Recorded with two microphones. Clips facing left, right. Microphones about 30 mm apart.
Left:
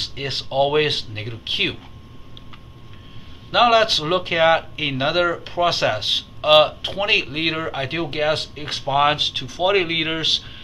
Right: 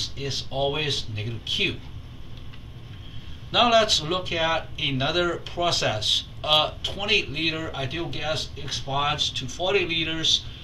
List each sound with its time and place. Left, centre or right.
0.0 s speech: left
3.5 s a man's voice: centre
3.8 s speech: left
4.7 s speech: centre; by 10.4 s left